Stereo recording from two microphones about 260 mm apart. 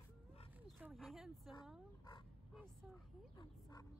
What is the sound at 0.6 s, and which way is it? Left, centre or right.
Speech, centre.